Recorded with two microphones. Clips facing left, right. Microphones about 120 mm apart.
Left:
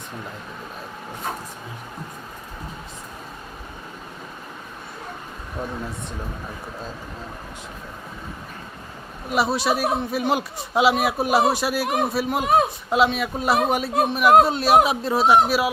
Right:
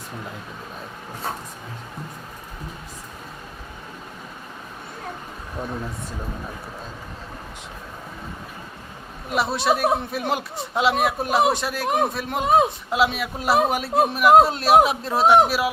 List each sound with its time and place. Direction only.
9.3 s speech: centre (ahead or behind)